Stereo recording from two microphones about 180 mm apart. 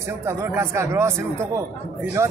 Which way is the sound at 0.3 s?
15° right (ahead or behind).